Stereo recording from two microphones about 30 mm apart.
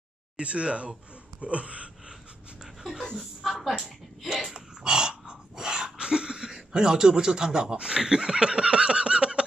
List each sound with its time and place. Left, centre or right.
0.4 s a sound: right
2.6 s dog: centre
3.2 s a woman's voice: centre
4.6 s dog: right
6.8 s speech: right
8.5 s a sound: right